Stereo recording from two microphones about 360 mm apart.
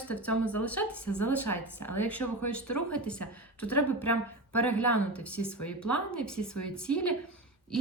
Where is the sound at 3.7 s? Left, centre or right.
Left.